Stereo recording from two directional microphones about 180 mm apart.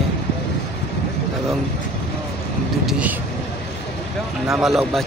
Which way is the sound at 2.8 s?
10° right (ahead or behind).